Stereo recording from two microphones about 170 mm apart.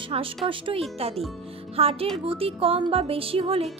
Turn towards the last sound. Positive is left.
turn(degrees=-35)  # may be behind; listen again after turning